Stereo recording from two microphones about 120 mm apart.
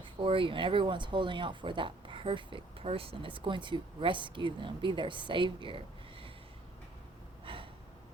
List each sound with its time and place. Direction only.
0.0 s speech: 45° right (ahead or behind)
7.4 s gasp: 45° right (ahead or behind)